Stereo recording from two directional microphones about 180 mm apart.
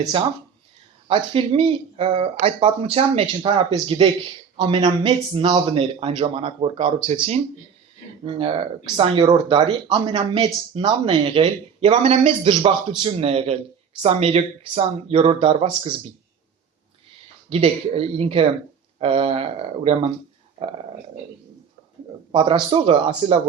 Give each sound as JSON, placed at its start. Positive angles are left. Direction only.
{"t": 0.1, "sound": "a man's voice", "side_deg": -30}
{"t": 17.5, "sound": "speech", "side_deg": -30}
{"t": 22.3, "sound": "a man's voice", "side_deg": -25}